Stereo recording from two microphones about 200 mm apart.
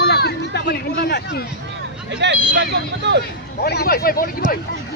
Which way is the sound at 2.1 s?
60° right (ahead or behind).